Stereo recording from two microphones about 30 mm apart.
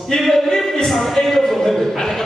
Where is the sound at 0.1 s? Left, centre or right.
Left.